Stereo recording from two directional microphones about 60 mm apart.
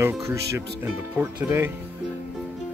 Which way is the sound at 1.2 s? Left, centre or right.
Right.